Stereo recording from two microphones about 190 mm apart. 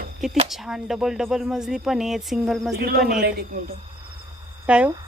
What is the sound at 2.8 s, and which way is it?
Speech, 55° right (ahead or behind).